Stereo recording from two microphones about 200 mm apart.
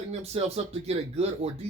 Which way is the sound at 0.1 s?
30° right (ahead or behind).